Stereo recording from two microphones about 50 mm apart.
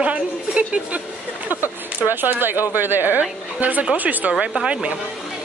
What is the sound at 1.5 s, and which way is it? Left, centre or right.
Speech, right.